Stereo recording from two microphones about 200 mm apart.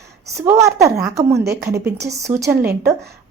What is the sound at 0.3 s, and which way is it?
A woman's voice, 15° right (ahead or behind).